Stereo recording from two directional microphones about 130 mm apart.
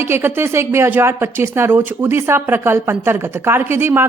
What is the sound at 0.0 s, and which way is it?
Speech, 20° right (ahead or behind).